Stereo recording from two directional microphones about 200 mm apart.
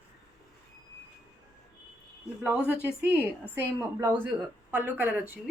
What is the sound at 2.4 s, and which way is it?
A woman's voice, 5° right (ahead or behind).